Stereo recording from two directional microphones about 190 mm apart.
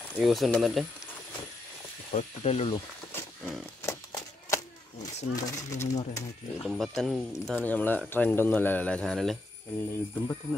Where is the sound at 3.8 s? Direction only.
15° left (ahead or behind).